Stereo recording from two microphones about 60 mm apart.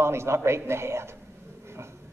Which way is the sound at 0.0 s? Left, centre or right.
Right.